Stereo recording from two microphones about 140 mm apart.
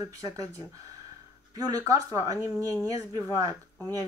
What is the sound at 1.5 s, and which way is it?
Speech, 25° right (ahead or behind).